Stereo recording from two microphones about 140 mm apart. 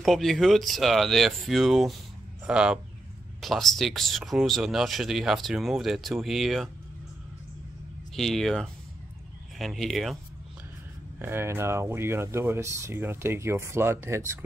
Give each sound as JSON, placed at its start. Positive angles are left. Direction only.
{"t": 0.0, "sound": "speech", "side_deg": 0}
{"t": 8.2, "sound": "speech", "side_deg": 0}
{"t": 11.1, "sound": "speech", "side_deg": -15}